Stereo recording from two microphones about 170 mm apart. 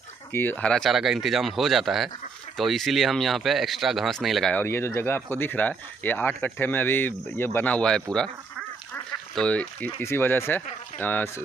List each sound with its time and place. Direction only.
0.3 s speech: 10° left (ahead or behind)
4.6 s speech: 15° left (ahead or behind)